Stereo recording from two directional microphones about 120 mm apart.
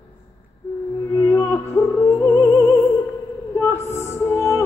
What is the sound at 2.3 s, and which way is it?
Music, 30° left (ahead or behind).